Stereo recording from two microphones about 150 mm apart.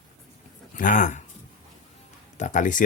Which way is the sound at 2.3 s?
55° left (ahead or behind).